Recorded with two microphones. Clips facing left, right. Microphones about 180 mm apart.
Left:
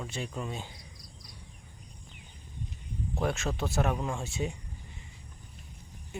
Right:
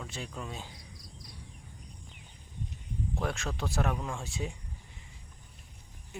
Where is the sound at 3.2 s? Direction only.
5° left (ahead or behind).